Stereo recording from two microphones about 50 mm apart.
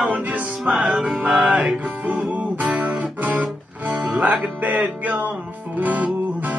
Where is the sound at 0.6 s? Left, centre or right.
Centre.